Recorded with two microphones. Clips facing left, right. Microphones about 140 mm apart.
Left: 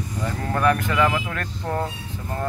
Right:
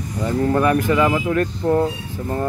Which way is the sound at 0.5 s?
15° right (ahead or behind).